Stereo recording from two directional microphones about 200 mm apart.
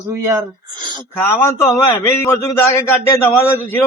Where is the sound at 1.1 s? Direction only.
10° left (ahead or behind).